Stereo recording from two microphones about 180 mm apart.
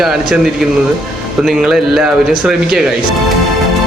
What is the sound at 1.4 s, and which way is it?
A man's voice, centre (ahead or behind).